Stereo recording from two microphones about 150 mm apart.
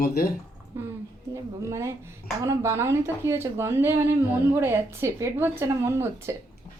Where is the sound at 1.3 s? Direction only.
20° right (ahead or behind).